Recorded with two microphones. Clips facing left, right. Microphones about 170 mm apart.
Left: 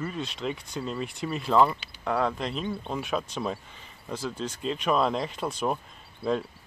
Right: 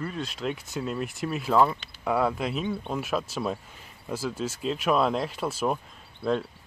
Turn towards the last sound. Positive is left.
turn(degrees=0)  # may be behind; listen again after turning